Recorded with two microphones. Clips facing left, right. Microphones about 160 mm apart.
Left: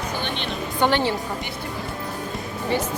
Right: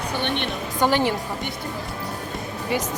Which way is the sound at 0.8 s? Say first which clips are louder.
Even; 10° right (ahead or behind).